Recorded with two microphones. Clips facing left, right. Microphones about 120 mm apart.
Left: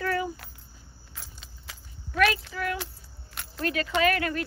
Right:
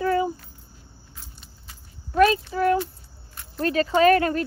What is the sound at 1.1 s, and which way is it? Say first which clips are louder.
Keys jangling: left 3 dB; 90° left.